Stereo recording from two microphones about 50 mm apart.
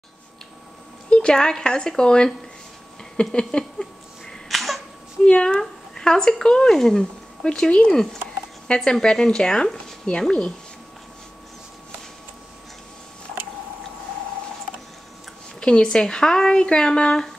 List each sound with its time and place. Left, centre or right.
1.1 s speech: centre
4.5 s sneeze: centre
5.2 s speech: centre
15.6 s speech: centre